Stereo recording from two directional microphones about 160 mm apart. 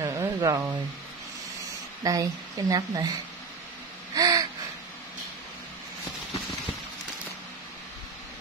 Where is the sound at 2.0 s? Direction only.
20° right (ahead or behind).